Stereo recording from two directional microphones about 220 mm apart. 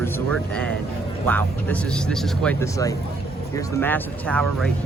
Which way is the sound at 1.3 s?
5° left (ahead or behind).